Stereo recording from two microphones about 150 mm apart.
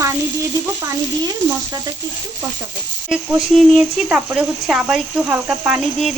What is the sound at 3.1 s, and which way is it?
A woman's voice, 5° right (ahead or behind).